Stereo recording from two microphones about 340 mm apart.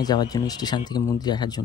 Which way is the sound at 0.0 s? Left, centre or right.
Centre.